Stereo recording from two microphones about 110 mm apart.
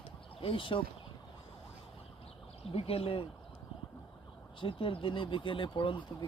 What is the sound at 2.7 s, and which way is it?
Speech, 65° left (ahead or behind).